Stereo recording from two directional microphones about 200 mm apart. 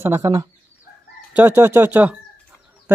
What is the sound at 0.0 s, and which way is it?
Speech, 15° right (ahead or behind).